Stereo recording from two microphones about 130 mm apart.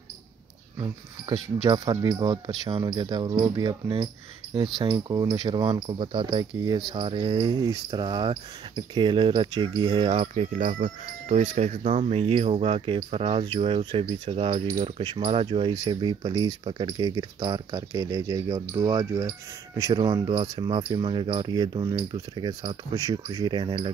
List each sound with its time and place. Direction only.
2.0 s speech: 30° right (ahead or behind)
4.7 s speech: 30° right (ahead or behind)
10.3 s speech: 60° right (ahead or behind); by 23.9 s 40° right (ahead or behind)